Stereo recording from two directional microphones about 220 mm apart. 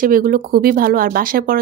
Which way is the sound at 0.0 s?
40° right (ahead or behind).